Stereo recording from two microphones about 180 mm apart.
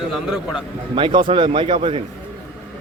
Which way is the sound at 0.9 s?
25° right (ahead or behind).